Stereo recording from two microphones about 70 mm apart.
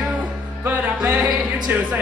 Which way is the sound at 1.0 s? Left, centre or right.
Centre.